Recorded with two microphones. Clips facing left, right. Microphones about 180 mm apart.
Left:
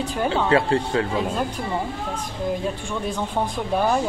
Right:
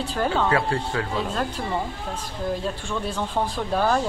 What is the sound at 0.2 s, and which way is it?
Speech, 15° left (ahead or behind).